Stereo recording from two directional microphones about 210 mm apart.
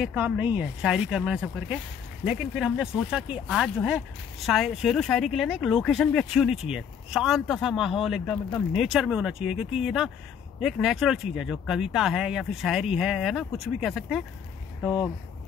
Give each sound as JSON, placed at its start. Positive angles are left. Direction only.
{"t": 0.0, "sound": "speech", "side_deg": -5}